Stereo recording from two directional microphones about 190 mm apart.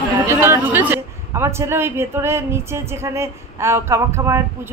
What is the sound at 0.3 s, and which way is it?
A man's voice, 15° right (ahead or behind).